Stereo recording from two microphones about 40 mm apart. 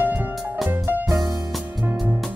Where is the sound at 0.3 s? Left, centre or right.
Centre.